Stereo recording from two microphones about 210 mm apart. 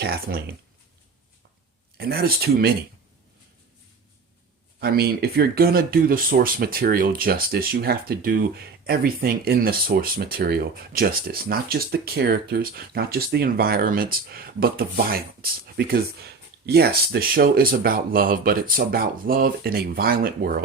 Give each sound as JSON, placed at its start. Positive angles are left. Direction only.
{"t": 0.0, "sound": "speech", "side_deg": -45}
{"t": 2.0, "sound": "speech", "side_deg": -45}
{"t": 4.8, "sound": "speech", "side_deg": -50}